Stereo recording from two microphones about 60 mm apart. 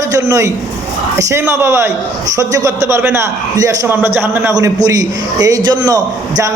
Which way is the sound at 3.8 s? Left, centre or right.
Right.